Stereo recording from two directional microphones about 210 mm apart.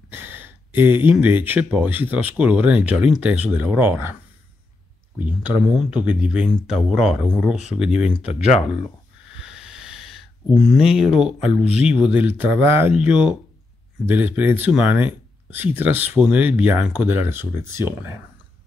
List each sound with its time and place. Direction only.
0.1 s speech: 10° right (ahead or behind)
5.2 s speech: 5° right (ahead or behind)
9.4 s a sound: 5° right (ahead or behind)
12.1 s speech: 5° right (ahead or behind)